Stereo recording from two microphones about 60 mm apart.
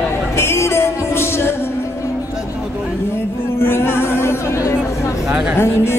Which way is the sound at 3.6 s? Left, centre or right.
Left.